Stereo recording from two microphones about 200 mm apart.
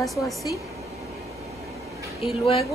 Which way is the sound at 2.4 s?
30° left (ahead or behind).